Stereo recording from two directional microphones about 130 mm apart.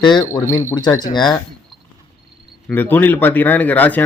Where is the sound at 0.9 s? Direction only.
35° left (ahead or behind).